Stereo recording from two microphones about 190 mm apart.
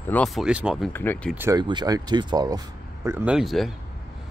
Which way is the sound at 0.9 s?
10° left (ahead or behind).